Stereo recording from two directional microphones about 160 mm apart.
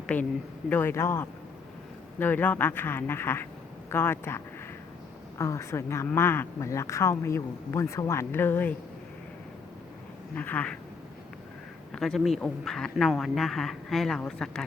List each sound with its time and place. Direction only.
0.1 s speech: 10° left (ahead or behind)
10.3 s speech: 10° left (ahead or behind)
11.9 s speech: centre (ahead or behind)